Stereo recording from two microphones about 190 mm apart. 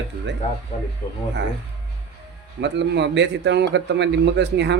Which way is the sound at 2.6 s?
65° right (ahead or behind).